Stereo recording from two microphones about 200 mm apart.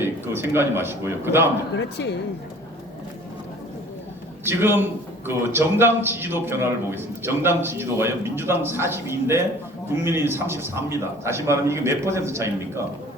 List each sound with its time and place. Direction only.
0.0 s a man's voice: 10° right (ahead or behind)
1.7 s speech: 60° left (ahead or behind)
4.4 s a man's voice: 10° right (ahead or behind)